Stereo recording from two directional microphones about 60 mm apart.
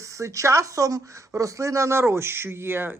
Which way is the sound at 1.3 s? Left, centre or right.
Right.